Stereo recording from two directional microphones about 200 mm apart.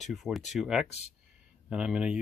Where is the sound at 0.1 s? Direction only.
Centre (ahead or behind).